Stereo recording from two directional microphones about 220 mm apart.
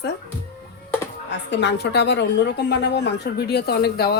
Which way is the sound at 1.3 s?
50° left (ahead or behind).